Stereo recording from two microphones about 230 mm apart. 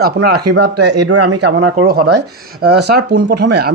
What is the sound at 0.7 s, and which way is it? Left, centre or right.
Speech, right.